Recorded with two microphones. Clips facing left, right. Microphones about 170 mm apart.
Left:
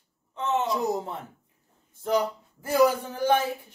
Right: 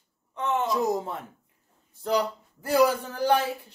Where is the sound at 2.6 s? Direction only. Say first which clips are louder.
Even; 20° left (ahead or behind).